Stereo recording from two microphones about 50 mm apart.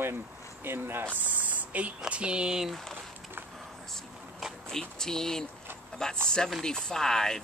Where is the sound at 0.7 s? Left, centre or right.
Right.